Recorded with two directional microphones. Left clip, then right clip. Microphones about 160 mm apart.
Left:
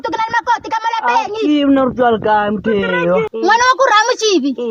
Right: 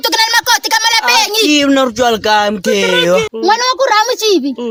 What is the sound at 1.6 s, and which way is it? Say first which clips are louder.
A child's voice: right 2 dB; 25° right (ahead or behind).